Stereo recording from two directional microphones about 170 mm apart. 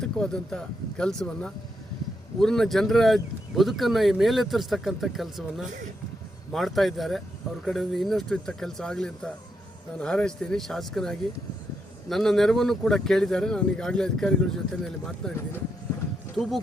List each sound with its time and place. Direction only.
0.0 s speech: 5° left (ahead or behind)
5.6 s speech: 45° right (ahead or behind)
6.5 s speech: centre (ahead or behind)